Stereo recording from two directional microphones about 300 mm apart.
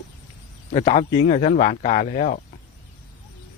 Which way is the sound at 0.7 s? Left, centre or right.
Centre.